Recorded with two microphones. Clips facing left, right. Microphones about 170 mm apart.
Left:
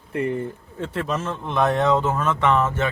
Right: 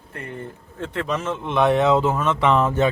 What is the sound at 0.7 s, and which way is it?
A man's voice, 5° left (ahead or behind).